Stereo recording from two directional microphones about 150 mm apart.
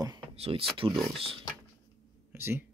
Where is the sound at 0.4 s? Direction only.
40° right (ahead or behind).